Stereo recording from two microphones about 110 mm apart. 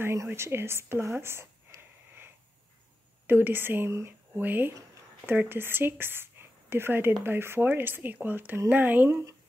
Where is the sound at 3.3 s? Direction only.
20° right (ahead or behind).